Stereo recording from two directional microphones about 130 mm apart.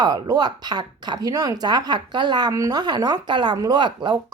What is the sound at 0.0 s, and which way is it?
Speech, 30° right (ahead or behind).